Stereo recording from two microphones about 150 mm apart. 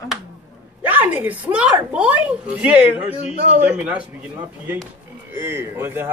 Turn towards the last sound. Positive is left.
turn(degrees=-15)  # may be behind; listen again after turning